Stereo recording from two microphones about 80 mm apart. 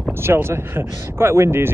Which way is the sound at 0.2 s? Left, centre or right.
Right.